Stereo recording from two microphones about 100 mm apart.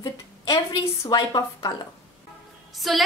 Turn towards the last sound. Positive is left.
turn(degrees=0)  # may be behind; listen again after turning